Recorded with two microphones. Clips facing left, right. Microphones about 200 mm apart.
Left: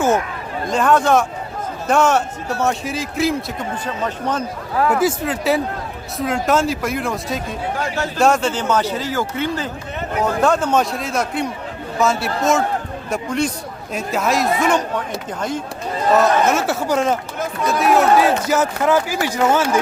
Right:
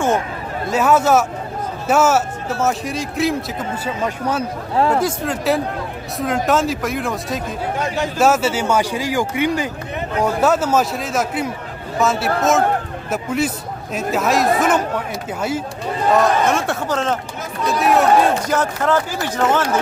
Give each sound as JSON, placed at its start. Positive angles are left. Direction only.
{"t": 0.7, "sound": "a man's voice", "side_deg": -5}
{"t": 4.7, "sound": "speech", "side_deg": -25}
{"t": 5.0, "sound": "a man's voice", "side_deg": 0}
{"t": 7.8, "sound": "a man's voice", "side_deg": -15}
{"t": 8.2, "sound": "a man's voice", "side_deg": -5}
{"t": 16.1, "sound": "a man's voice", "side_deg": 5}
{"t": 17.7, "sound": "a man's voice", "side_deg": 0}